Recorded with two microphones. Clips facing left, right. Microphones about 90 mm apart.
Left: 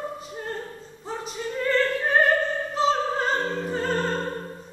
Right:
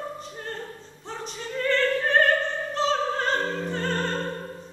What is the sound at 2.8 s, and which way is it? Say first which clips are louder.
Opera: left 2 dB; 5° left (ahead or behind).